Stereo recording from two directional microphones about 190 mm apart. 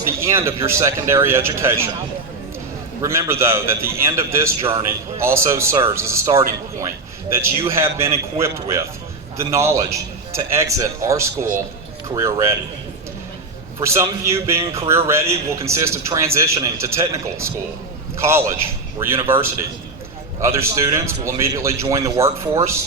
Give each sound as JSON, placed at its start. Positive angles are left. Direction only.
{"t": 0.2, "sound": "a man's voice", "side_deg": -15}
{"t": 3.0, "sound": "a man's voice", "side_deg": -15}
{"t": 13.7, "sound": "a man's voice", "side_deg": -15}